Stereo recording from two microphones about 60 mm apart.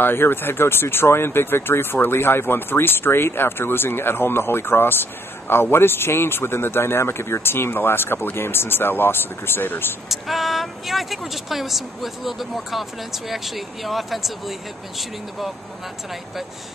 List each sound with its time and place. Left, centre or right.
0.0 s speech: left
10.0 s speech: centre